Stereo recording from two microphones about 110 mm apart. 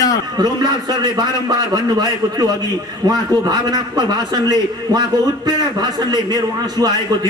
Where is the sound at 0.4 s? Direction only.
35° right (ahead or behind).